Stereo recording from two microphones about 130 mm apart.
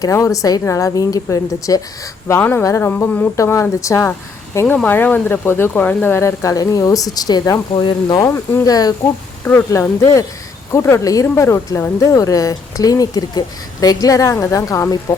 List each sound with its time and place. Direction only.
0.0 s speech: 25° left (ahead or behind)
4.6 s speech: 10° left (ahead or behind); by 8.9 s 30° left (ahead or behind)
9.4 s speech: 15° left (ahead or behind)